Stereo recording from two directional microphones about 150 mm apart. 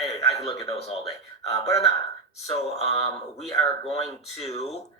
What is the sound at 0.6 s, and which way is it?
Speech, 45° left (ahead or behind).